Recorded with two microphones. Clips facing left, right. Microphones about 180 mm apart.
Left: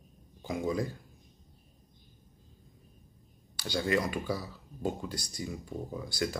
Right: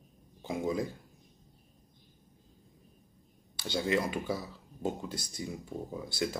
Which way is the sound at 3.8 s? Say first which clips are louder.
Even; 25° right (ahead or behind).